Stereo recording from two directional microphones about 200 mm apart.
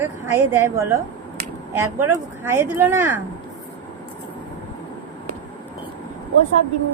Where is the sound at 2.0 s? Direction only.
10° right (ahead or behind).